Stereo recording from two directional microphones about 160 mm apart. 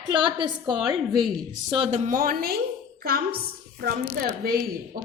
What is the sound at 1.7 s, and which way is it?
Speech, 35° right (ahead or behind).